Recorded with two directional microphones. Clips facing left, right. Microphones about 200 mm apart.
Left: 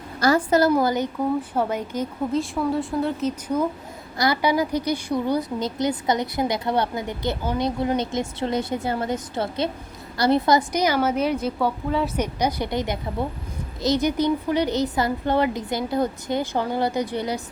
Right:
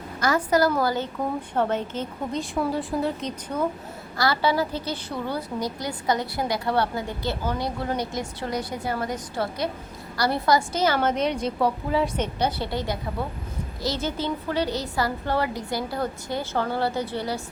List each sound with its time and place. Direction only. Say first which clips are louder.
0.2 s a woman's voice: left 3 dB; 30° left (ahead or behind); by 2.4 s 10° left (ahead or behind)
2.4 s a woman's voice: left 2 dB; centre (ahead or behind)
12.1 s a woman's voice: left 2 dB; 10° left (ahead or behind)